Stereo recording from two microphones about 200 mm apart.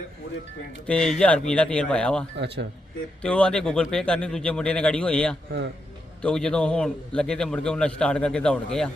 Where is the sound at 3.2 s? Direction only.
5° left (ahead or behind).